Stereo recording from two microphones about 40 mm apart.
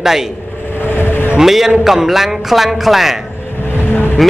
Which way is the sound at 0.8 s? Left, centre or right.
Left.